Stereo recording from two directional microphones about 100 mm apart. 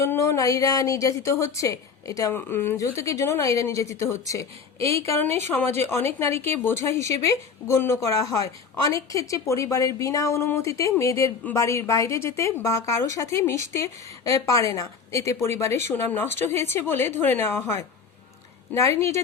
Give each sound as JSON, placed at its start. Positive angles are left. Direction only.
{"t": 0.0, "sound": "a woman's voice", "side_deg": 30}
{"t": 2.3, "sound": "a woman's voice", "side_deg": 25}